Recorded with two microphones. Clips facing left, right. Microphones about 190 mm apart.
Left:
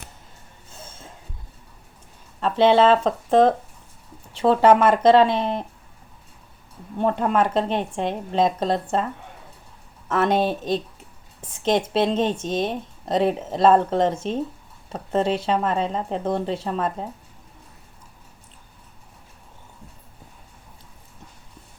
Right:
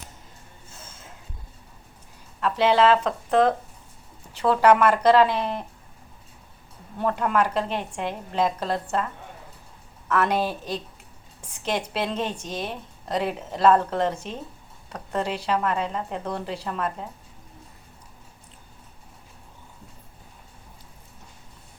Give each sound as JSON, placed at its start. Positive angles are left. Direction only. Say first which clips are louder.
{"t": 2.4, "sound": "speech", "louder": "left 3 dB", "side_deg": 25}
{"t": 7.0, "sound": "speech", "louder": "left 3 dB", "side_deg": 25}
{"t": 10.1, "sound": "speech", "louder": "left 3 dB", "side_deg": 25}
{"t": 11.9, "sound": "speech", "louder": "left 7 dB", "side_deg": 25}